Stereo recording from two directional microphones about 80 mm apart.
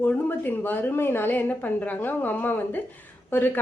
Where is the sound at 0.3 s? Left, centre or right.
Left.